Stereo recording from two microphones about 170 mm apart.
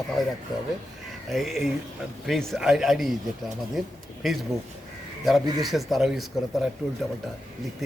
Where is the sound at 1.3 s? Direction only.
Centre (ahead or behind).